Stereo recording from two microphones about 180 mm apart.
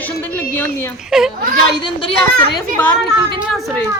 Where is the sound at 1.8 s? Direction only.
25° left (ahead or behind).